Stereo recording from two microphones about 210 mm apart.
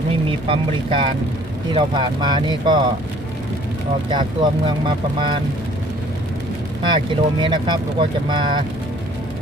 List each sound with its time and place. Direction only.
0.3 s speech: 25° right (ahead or behind)
4.1 s speech: 20° right (ahead or behind)
6.9 s speech: 20° right (ahead or behind)